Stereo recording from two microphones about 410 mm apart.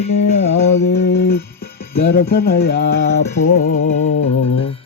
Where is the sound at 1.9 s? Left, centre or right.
Left.